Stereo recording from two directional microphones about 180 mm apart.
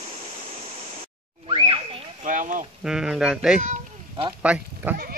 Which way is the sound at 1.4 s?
30° right (ahead or behind).